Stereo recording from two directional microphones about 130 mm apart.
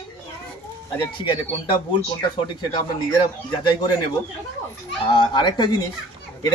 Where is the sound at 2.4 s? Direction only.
35° left (ahead or behind).